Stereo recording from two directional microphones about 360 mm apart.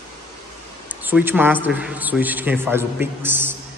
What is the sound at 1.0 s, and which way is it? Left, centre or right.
A man's voice, centre.